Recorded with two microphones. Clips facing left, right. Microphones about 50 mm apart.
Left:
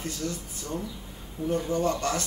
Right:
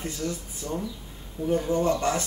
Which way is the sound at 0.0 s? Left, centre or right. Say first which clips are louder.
Right 2 dB; centre.